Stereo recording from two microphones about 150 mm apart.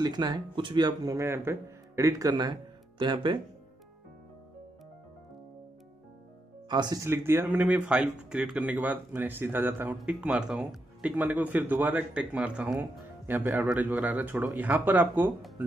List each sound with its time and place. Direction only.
0.0 s speech: 30° right (ahead or behind)
6.7 s speech: 25° right (ahead or behind); by 15.2 s 10° right (ahead or behind)